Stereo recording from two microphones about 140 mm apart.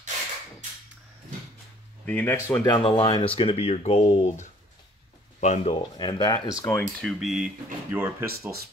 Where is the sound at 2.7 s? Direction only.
35° left (ahead or behind); by 5.8 s 55° left (ahead or behind).